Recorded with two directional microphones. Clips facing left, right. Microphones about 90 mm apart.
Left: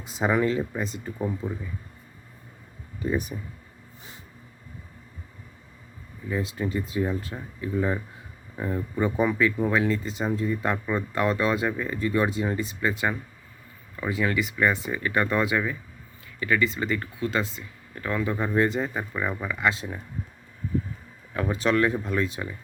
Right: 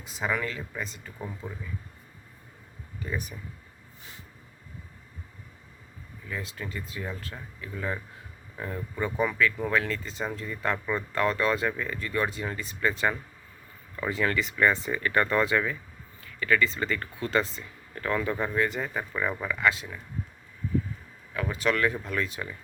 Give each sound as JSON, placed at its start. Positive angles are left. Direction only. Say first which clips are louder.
{"t": 0.0, "sound": "speech", "louder": "left 7 dB", "side_deg": 20}
{"t": 3.0, "sound": "speech", "louder": "left 7 dB", "side_deg": 20}
{"t": 6.2, "sound": "speech", "louder": "left 8 dB", "side_deg": 20}
{"t": 18.5, "sound": "speech", "louder": "left 4 dB", "side_deg": 25}
{"t": 19.7, "sound": "speech", "louder": "left 5 dB", "side_deg": 30}
{"t": 21.3, "sound": "speech", "louder": "left 4 dB", "side_deg": 25}